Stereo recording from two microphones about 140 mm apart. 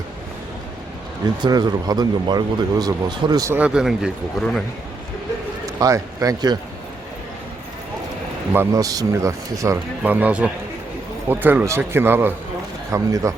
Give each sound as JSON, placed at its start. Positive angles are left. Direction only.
{"t": 1.4, "sound": "speech", "side_deg": -30}
{"t": 3.5, "sound": "speech", "side_deg": -5}
{"t": 5.6, "sound": "a man's voice", "side_deg": -25}
{"t": 8.5, "sound": "speech", "side_deg": -25}
{"t": 10.0, "sound": "a man's voice", "side_deg": -10}